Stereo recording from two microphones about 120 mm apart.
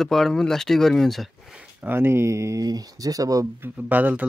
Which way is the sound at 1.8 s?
20° right (ahead or behind).